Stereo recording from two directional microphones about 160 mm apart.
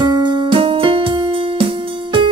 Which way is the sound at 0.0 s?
25° right (ahead or behind).